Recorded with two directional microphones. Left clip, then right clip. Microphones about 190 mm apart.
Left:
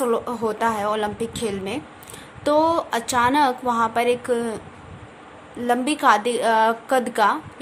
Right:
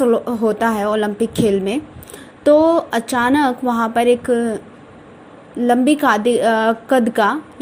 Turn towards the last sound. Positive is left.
turn(degrees=-15)  # may be behind; listen again after turning